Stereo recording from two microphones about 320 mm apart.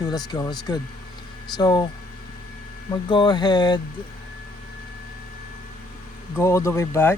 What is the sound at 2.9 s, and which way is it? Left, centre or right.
Speech, centre.